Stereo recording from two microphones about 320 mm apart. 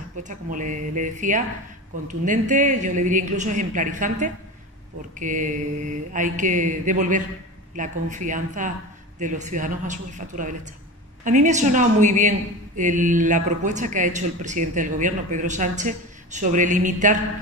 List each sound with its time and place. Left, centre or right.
0.2 s speech: right